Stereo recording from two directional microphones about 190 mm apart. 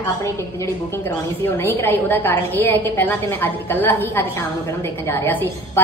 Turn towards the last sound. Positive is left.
turn(degrees=10)  # may be behind; listen again after turning